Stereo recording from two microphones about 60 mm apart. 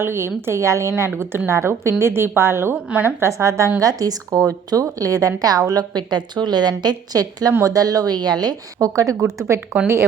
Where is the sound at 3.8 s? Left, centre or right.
Right.